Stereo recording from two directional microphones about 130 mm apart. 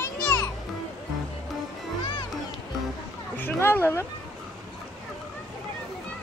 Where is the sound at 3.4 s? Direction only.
15° left (ahead or behind).